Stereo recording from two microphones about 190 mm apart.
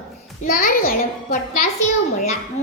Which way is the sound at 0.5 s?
50° left (ahead or behind).